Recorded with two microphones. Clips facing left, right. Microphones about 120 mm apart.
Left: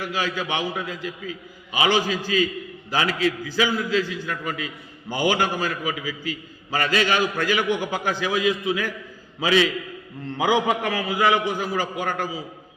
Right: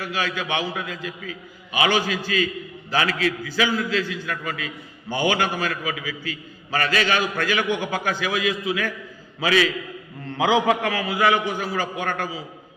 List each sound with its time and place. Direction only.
0.0 s a man's voice: 15° left (ahead or behind)